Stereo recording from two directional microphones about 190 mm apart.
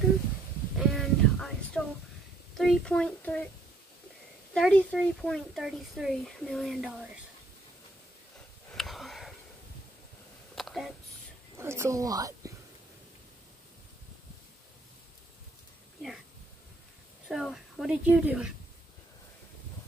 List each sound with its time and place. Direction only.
0.7 s a sound: centre (ahead or behind)
2.5 s speech: centre (ahead or behind)
4.6 s speech: 5° left (ahead or behind)
8.7 s sniff: centre (ahead or behind)
10.5 s a sound: centre (ahead or behind)
11.5 s speech: 15° right (ahead or behind)
17.3 s speech: centre (ahead or behind)